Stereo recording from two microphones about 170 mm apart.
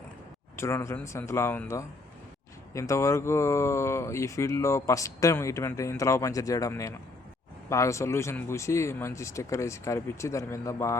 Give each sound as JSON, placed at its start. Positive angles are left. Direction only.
{"t": 0.5, "sound": "speech", "side_deg": 15}